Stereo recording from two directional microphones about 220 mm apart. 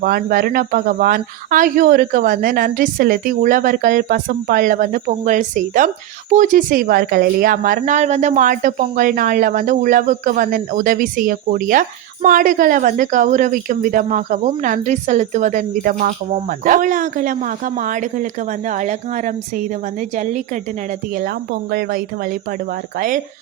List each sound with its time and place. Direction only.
0.0 s a woman's voice: 40° right (ahead or behind)